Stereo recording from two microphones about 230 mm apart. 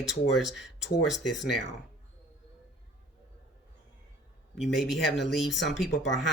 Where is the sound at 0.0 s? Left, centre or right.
Centre.